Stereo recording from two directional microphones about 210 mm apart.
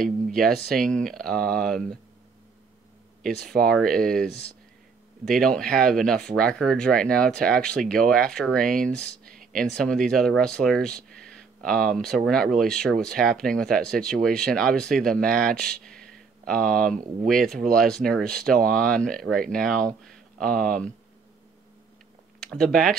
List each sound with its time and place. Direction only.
0.0 s speech: centre (ahead or behind)
3.2 s speech: centre (ahead or behind)
22.4 s speech: centre (ahead or behind)